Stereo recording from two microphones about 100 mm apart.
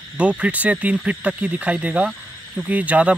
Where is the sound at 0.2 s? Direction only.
10° right (ahead or behind).